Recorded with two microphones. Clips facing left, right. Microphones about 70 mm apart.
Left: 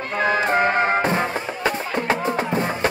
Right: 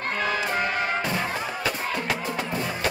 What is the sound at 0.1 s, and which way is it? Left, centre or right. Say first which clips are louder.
Music: left 8 dB; left.